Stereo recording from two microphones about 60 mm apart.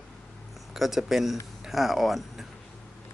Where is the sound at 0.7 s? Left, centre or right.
Centre.